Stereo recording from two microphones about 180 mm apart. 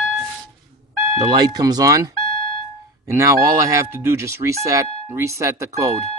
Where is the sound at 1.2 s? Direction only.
20° right (ahead or behind).